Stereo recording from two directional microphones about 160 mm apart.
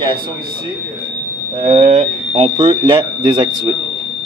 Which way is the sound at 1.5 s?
45° right (ahead or behind).